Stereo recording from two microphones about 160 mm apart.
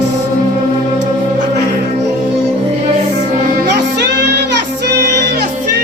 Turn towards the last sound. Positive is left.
turn(degrees=-90)